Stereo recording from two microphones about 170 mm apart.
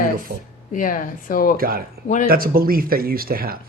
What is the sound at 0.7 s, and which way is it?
Speech, 50° left (ahead or behind).